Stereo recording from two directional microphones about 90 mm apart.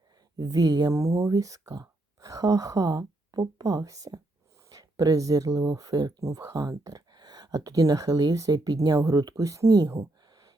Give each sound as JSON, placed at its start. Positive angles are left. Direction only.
{"t": 0.3, "sound": "speech", "side_deg": -45}
{"t": 0.9, "sound": "speech", "side_deg": -35}